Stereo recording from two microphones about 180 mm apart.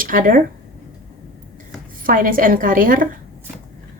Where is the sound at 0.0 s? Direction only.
50° right (ahead or behind).